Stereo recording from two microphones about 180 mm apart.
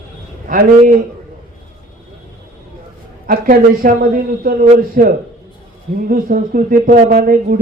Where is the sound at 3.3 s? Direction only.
50° right (ahead or behind).